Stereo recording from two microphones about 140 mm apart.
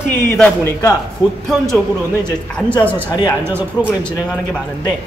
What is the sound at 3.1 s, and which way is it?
Speech, 30° left (ahead or behind).